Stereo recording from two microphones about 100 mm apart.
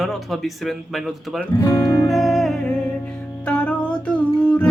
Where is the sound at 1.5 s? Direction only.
35° left (ahead or behind).